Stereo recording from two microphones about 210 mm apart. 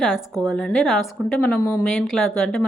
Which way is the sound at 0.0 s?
Centre (ahead or behind).